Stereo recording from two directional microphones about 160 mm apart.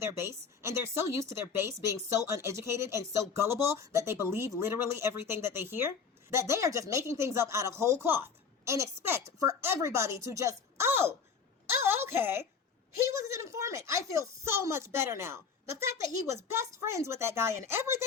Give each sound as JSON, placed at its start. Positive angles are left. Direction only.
{"t": 0.0, "sound": "speech", "side_deg": -15}
{"t": 11.9, "sound": "a sound", "side_deg": -15}
{"t": 13.0, "sound": "speech", "side_deg": -20}